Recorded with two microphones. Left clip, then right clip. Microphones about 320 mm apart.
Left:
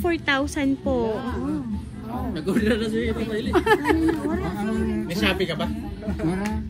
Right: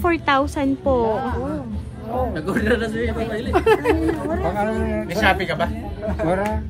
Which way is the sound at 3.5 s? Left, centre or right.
Left.